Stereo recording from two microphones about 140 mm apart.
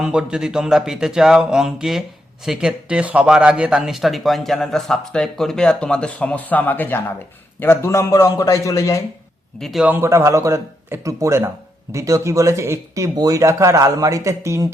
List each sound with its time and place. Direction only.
0.0 s a man's voice: 5° right (ahead or behind); by 9.0 s 20° left (ahead or behind)
9.6 s speech: centre (ahead or behind)
9.8 s speech: 15° right (ahead or behind)